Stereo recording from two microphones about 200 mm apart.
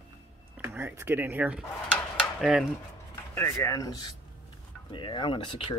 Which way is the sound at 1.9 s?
Centre (ahead or behind).